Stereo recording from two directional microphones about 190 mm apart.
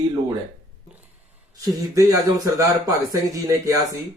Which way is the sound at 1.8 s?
20° right (ahead or behind).